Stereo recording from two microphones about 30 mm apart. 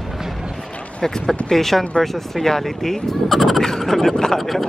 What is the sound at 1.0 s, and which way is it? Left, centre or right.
Speech, centre.